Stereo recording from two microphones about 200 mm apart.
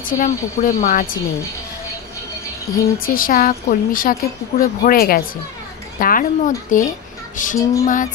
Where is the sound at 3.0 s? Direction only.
45° left (ahead or behind).